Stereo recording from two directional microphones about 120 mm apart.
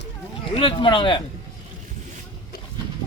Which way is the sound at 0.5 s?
45° left (ahead or behind).